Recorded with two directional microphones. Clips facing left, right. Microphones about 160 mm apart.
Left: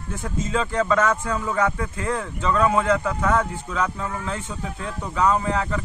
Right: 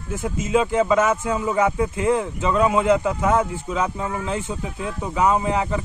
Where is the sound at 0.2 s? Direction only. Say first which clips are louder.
Right 5 dB; 10° right (ahead or behind).